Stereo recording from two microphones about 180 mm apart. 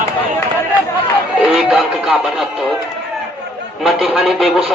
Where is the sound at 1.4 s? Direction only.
5° right (ahead or behind).